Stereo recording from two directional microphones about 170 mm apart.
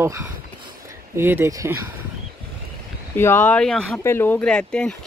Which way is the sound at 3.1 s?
10° left (ahead or behind).